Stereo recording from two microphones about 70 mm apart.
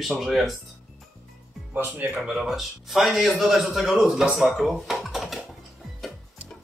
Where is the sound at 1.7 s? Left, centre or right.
Right.